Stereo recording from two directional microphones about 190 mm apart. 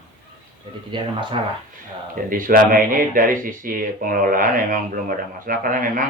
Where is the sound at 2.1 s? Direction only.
45° right (ahead or behind).